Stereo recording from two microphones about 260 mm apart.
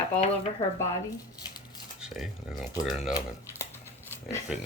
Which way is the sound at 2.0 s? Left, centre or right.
Centre.